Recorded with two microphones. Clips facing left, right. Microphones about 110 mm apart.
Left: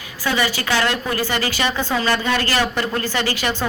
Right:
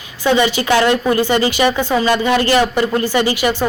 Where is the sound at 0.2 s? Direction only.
20° right (ahead or behind).